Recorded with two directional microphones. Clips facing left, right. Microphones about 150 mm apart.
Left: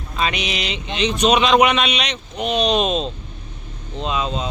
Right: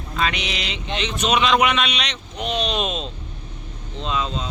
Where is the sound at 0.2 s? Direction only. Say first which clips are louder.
Left 2 dB; 15° left (ahead or behind).